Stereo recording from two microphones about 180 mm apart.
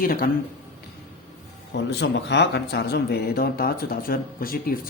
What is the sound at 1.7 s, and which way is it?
Speech, 70° left (ahead or behind).